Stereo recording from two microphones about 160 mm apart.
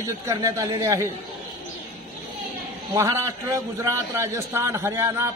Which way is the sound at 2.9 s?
20° right (ahead or behind).